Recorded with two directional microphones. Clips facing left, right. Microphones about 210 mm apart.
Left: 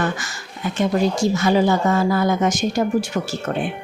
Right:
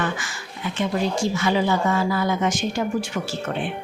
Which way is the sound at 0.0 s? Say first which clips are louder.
Left 3 dB; 40° left (ahead or behind).